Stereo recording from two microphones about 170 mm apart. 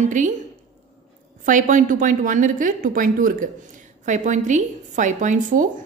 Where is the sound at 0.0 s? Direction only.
50° right (ahead or behind).